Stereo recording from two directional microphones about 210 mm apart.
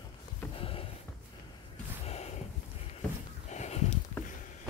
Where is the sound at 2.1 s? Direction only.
30° left (ahead or behind).